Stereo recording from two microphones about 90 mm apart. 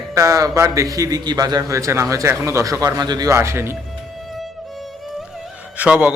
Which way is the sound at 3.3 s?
30° right (ahead or behind).